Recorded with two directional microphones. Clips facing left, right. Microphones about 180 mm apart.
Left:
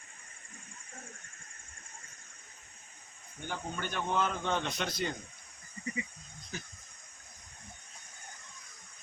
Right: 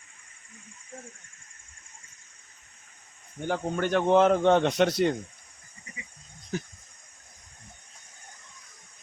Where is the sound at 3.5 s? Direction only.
75° right (ahead or behind).